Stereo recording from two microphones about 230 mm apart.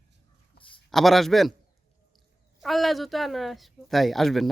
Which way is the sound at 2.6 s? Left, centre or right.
Centre.